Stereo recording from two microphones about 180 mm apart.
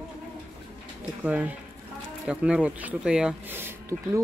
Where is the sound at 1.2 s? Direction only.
5° right (ahead or behind).